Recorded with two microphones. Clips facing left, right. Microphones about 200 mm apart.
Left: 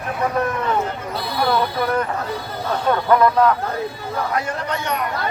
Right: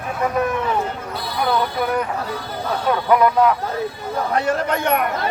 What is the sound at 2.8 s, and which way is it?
Speech, 5° right (ahead or behind).